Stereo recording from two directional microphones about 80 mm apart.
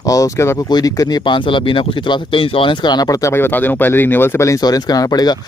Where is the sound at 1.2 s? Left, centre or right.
Left.